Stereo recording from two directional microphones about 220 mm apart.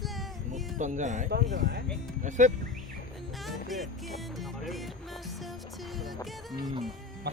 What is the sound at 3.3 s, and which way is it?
Music, centre (ahead or behind).